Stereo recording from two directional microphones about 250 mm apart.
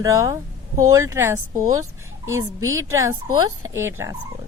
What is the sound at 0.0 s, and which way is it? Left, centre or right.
A woman's voice, centre.